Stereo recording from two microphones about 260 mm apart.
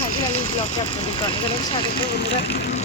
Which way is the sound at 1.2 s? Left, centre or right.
Centre.